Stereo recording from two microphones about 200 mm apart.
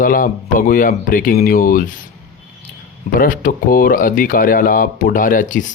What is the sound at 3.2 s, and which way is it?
Speech, 45° left (ahead or behind).